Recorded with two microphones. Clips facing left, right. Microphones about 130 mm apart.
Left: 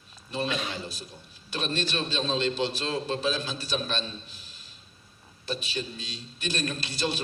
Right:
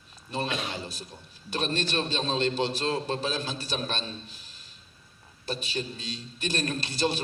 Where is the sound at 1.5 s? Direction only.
50° right (ahead or behind).